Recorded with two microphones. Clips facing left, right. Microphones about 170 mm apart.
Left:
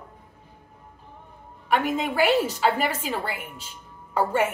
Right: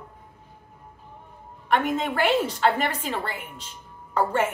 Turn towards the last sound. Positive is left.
turn(degrees=10)  # may be behind; listen again after turning